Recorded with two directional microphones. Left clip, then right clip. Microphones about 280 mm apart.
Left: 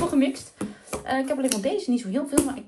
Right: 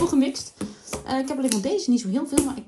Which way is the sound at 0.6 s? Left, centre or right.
Centre.